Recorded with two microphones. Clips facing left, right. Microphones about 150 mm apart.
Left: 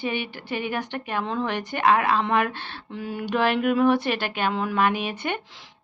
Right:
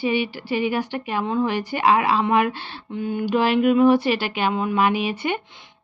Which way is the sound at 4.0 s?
55° left (ahead or behind).